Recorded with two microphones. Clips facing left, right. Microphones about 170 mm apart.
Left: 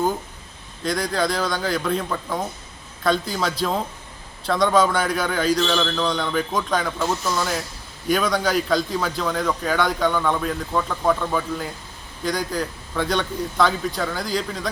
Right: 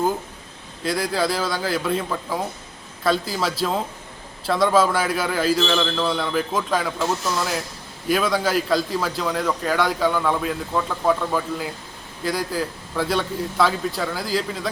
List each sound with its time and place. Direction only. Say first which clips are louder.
0.9 s a man's voice: even; 5° right (ahead or behind)